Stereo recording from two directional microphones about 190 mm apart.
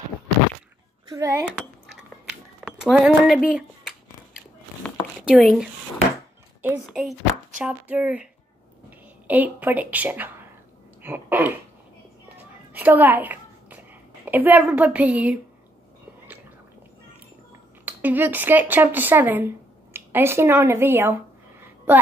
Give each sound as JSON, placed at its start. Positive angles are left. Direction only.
{"t": 1.0, "sound": "speech", "side_deg": -20}
{"t": 2.6, "sound": "speech", "side_deg": -5}
{"t": 5.2, "sound": "speech", "side_deg": 0}
{"t": 6.9, "sound": "speech", "side_deg": -5}
{"t": 9.3, "sound": "a woman's voice", "side_deg": -10}
{"t": 11.0, "sound": "throat clearing", "side_deg": -10}
{"t": 12.4, "sound": "a sound", "side_deg": -10}
{"t": 14.2, "sound": "a woman's voice", "side_deg": -10}
{"t": 17.8, "sound": "speech", "side_deg": -10}